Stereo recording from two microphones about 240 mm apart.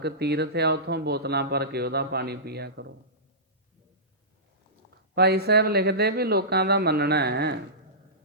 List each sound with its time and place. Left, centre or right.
0.0 s speech: right
5.1 s speech: right